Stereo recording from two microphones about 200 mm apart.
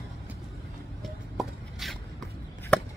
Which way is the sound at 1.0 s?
Centre (ahead or behind).